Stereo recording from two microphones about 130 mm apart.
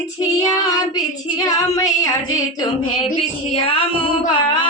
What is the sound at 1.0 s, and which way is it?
Female singing, 25° left (ahead or behind).